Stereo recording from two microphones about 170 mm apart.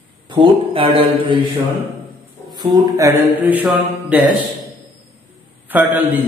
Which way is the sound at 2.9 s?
15° right (ahead or behind).